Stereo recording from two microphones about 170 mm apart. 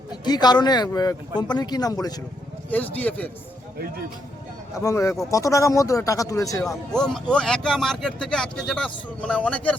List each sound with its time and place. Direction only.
0.3 s speech: 25° left (ahead or behind)
2.6 s speech: 10° left (ahead or behind)
4.7 s speech: 20° left (ahead or behind)
6.9 s speech: 5° left (ahead or behind)